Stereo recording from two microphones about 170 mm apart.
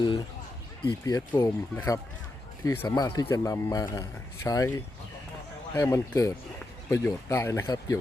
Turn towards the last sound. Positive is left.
turn(degrees=20)  # may be behind; listen again after turning